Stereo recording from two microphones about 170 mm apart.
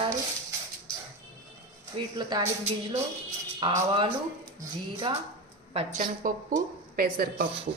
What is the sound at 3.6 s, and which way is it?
Speech, 25° right (ahead or behind).